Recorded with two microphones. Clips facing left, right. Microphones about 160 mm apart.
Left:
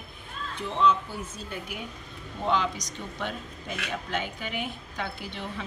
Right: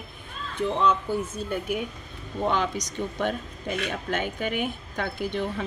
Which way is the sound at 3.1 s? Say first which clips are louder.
Right 5 dB; 50° right (ahead or behind).